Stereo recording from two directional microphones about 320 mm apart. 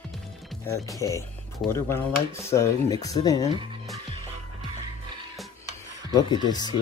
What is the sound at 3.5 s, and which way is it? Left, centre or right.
Speech, centre.